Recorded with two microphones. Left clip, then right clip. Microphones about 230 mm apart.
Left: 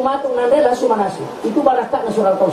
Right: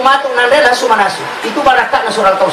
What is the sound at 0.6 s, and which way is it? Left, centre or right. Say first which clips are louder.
A woman's voice: right 5 dB; centre.